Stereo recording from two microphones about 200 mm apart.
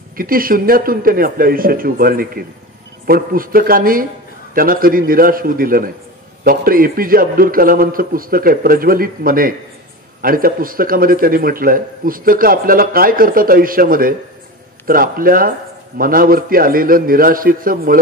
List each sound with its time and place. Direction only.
0.2 s speech: 45° right (ahead or behind)